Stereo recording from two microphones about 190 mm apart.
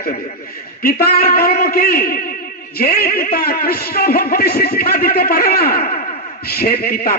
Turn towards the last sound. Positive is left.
turn(degrees=55)  # may be behind; listen again after turning